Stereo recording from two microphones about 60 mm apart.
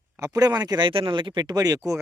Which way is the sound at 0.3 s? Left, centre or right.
Right.